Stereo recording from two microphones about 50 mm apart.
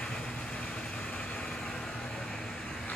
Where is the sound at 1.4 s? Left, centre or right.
Centre.